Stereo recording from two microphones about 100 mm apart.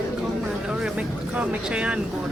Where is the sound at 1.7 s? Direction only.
10° right (ahead or behind).